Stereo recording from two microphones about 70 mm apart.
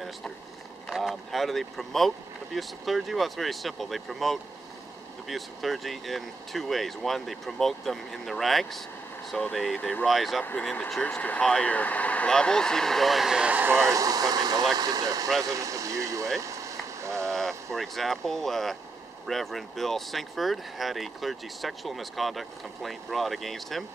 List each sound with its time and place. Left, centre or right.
0.8 s speech: centre
11.0 s speech: left; by 13.6 s centre
13.6 s speech: right
13.8 s speech: right
16.3 s rain on surface: right
17.3 s speech: centre